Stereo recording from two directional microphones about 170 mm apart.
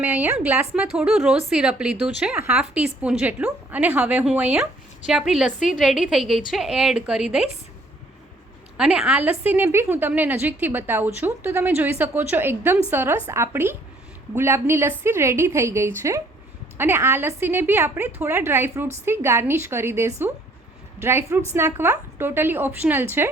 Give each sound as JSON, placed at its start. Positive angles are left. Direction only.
{"t": 0.0, "sound": "a woman's voice", "side_deg": -10}
{"t": 5.5, "sound": "a woman's voice", "side_deg": 50}
{"t": 5.8, "sound": "a woman's voice", "side_deg": -5}
{"t": 8.8, "sound": "a woman's voice", "side_deg": -5}